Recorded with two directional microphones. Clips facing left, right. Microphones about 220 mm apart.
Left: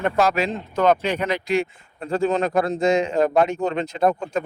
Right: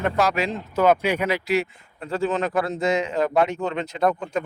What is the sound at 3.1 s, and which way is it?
Speech, 40° left (ahead or behind).